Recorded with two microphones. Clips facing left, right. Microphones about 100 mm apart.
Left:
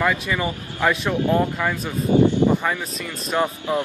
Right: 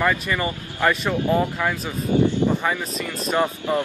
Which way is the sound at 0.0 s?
Centre (ahead or behind).